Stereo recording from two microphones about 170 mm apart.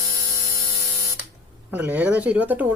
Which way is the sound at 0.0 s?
20° right (ahead or behind).